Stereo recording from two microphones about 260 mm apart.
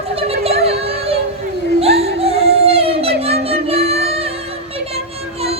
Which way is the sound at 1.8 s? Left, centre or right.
Right.